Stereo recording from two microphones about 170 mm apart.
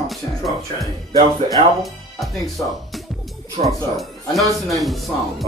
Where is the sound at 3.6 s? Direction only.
40° right (ahead or behind).